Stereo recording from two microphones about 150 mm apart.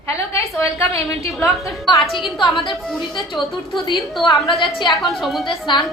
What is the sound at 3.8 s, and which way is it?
Speech, 30° left (ahead or behind).